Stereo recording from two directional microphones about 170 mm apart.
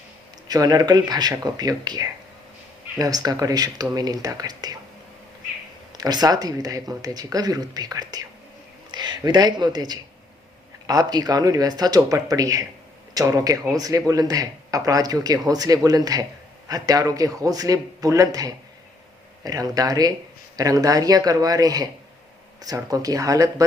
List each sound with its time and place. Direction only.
0.4 s speech: 25° right (ahead or behind)
5.9 s speech: 25° right (ahead or behind)